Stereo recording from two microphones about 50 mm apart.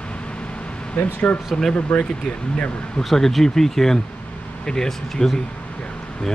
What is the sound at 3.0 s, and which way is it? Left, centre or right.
Speech, centre.